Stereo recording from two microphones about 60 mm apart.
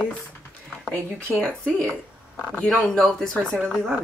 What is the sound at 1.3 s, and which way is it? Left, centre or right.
Speech, centre.